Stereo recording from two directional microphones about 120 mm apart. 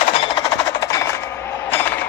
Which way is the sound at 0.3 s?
35° left (ahead or behind).